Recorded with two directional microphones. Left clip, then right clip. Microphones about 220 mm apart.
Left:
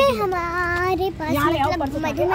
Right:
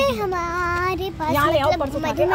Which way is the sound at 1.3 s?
35° right (ahead or behind).